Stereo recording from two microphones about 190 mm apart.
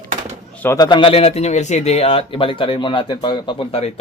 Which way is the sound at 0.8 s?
25° left (ahead or behind).